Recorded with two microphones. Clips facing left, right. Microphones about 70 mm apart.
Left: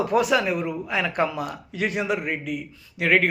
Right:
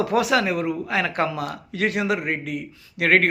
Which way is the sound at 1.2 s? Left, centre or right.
Right.